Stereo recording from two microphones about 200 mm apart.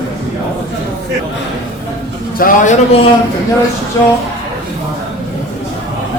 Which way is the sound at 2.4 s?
40° left (ahead or behind).